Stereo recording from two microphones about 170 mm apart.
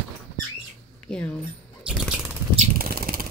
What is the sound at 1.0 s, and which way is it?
Speech, 5° left (ahead or behind).